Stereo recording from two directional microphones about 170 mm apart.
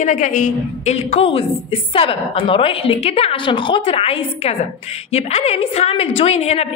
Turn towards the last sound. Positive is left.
turn(degrees=40)  # may be behind; listen again after turning